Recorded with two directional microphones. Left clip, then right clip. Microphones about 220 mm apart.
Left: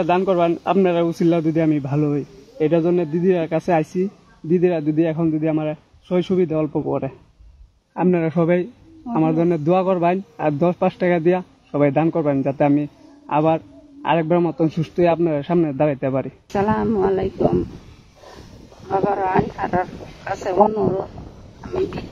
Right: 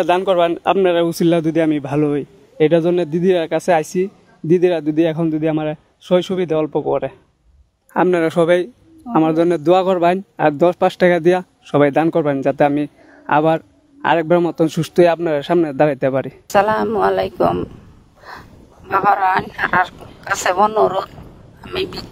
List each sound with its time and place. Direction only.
0.0 s a man's voice: 55° right (ahead or behind)
18.9 s a man's voice: 50° right (ahead or behind)
20.3 s speech: centre (ahead or behind)
20.6 s a man's voice: 45° right (ahead or behind)
21.5 s speech: centre (ahead or behind)